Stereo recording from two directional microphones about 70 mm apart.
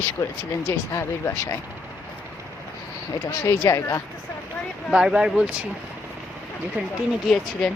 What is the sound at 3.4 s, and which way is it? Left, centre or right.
Speech, left.